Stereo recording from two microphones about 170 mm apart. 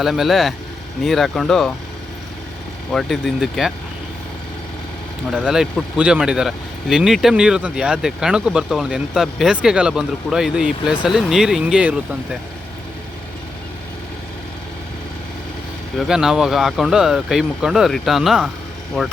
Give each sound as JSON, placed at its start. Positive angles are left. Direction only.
{"t": 0.0, "sound": "speech", "side_deg": 0}
{"t": 2.9, "sound": "speech", "side_deg": 0}
{"t": 5.3, "sound": "speech", "side_deg": -5}
{"t": 16.0, "sound": "speech", "side_deg": -5}